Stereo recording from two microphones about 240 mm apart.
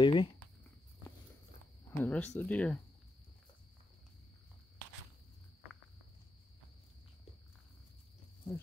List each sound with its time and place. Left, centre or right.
0.0 s speech: left
2.0 s speech: centre